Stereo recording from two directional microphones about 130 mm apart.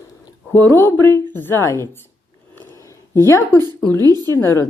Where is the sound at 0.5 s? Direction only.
15° left (ahead or behind).